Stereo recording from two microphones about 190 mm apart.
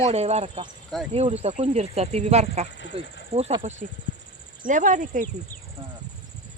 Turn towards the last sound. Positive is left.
turn(degrees=-45)  # may be behind; listen again after turning